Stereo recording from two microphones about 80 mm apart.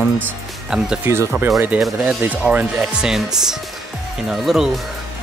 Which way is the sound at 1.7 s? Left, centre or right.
Centre.